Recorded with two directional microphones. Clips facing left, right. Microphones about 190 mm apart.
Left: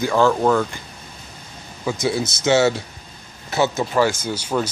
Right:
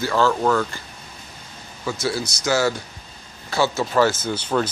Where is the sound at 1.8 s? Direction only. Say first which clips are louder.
Left 3 dB; 15° left (ahead or behind).